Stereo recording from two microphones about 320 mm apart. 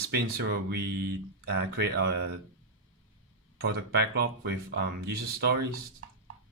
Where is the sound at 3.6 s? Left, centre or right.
Right.